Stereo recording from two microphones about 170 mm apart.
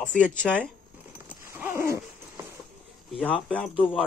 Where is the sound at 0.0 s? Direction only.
5° left (ahead or behind).